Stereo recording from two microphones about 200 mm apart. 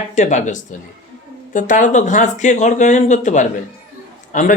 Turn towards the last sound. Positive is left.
turn(degrees=40)  # may be behind; listen again after turning